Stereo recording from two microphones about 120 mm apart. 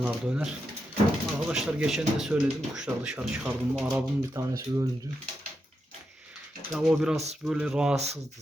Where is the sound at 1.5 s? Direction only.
5° right (ahead or behind).